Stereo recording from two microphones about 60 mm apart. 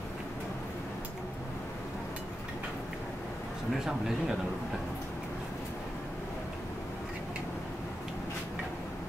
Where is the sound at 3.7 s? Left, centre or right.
Centre.